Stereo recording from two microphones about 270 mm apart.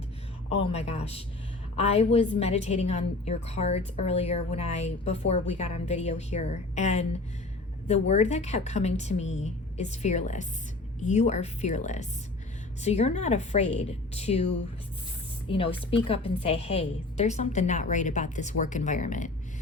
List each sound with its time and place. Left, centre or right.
0.6 s a woman's voice: left
15.5 s a woman's voice: centre